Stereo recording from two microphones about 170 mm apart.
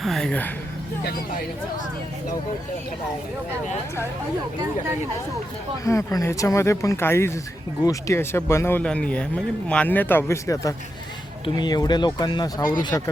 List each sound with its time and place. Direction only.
0.0 s a woman's voice: centre (ahead or behind)
5.8 s speech: 20° left (ahead or behind)